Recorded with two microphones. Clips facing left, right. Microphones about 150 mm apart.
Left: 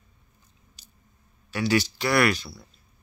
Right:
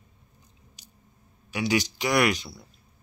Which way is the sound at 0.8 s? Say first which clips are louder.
Right 1 dB; 15° right (ahead or behind).